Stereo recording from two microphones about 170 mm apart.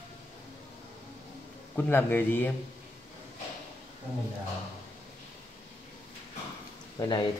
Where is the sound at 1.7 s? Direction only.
10° left (ahead or behind).